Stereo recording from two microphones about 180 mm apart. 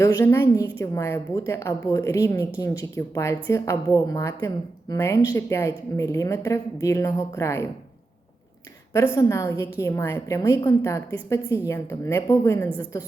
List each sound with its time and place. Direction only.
0.0 s a woman's voice: 20° left (ahead or behind)
9.1 s a woman's voice: 15° left (ahead or behind)